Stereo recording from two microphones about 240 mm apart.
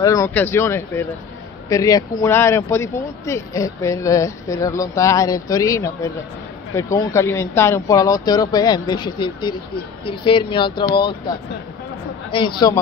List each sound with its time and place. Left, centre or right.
0.0 s speech: centre
12.6 s speech: centre